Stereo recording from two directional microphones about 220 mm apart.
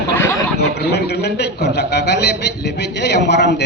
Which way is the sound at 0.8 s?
50° left (ahead or behind).